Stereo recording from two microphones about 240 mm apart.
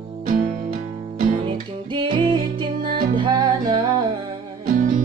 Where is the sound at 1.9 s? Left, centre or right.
Centre.